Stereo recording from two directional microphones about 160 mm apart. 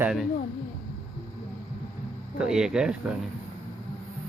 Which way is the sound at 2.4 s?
5° right (ahead or behind).